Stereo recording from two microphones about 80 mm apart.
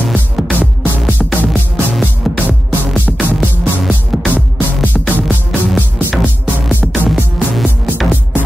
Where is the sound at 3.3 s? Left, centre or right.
Centre.